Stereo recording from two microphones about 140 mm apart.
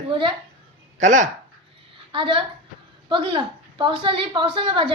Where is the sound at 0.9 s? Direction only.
60° right (ahead or behind).